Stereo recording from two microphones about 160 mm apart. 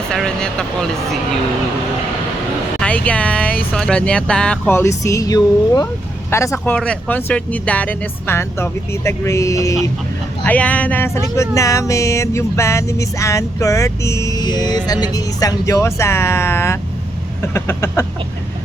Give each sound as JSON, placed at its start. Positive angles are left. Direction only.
{"t": 0.1, "sound": "speech", "side_deg": 5}
{"t": 2.8, "sound": "speech", "side_deg": 10}
{"t": 6.7, "sound": "speech", "side_deg": 5}